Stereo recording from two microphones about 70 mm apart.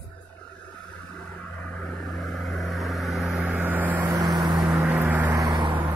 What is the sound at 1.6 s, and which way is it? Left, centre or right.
Vehicle, centre.